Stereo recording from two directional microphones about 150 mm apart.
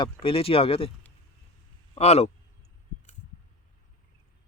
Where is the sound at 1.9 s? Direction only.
45° left (ahead or behind).